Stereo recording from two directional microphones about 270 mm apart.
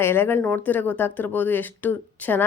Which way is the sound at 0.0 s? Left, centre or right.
Centre.